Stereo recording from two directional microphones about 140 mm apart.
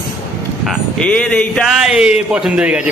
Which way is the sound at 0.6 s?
10° left (ahead or behind).